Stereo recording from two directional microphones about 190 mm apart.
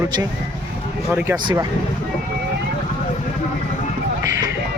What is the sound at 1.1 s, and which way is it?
Speech, 10° right (ahead or behind).